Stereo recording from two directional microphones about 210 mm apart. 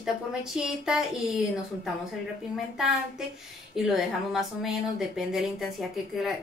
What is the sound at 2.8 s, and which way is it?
A woman's voice, centre (ahead or behind).